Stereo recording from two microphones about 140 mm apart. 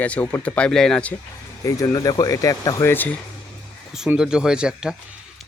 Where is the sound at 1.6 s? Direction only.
25° left (ahead or behind).